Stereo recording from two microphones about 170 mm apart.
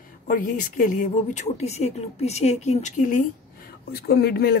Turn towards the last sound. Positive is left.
turn(degrees=70)  # may be behind; listen again after turning